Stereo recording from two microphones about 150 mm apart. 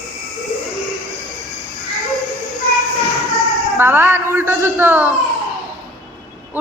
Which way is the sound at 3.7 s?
15° right (ahead or behind).